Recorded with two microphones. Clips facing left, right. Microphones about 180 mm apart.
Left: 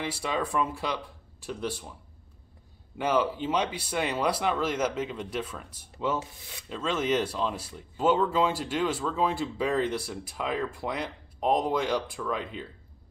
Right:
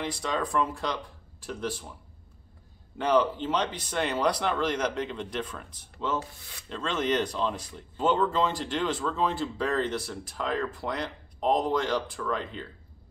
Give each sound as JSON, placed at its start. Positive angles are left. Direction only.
{"t": 0.0, "sound": "speech", "side_deg": 10}
{"t": 3.0, "sound": "speech", "side_deg": 10}